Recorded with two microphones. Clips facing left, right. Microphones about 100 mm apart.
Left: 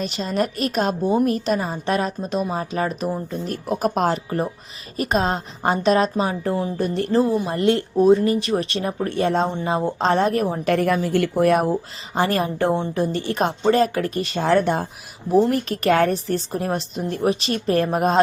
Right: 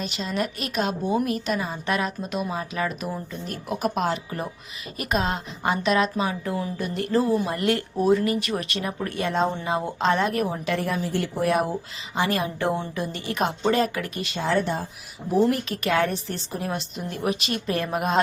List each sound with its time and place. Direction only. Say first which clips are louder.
0.0 s a woman's voice: left 5 dB; 40° left (ahead or behind)
12.1 s a woman's voice: left 4 dB; 40° left (ahead or behind); by 14.8 s 60° left (ahead or behind)
15.4 s a woman's voice: left 5 dB; 40° left (ahead or behind)